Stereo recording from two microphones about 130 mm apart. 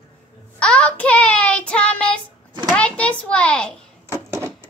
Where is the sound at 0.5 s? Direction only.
10° left (ahead or behind).